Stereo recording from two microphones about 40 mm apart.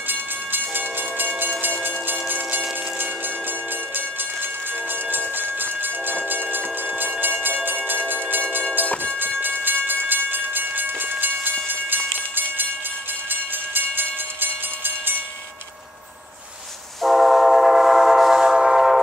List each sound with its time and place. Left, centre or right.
0.1 s train: right
3.9 s train: right
8.8 s train: left
9.4 s train: right
17.0 s train: centre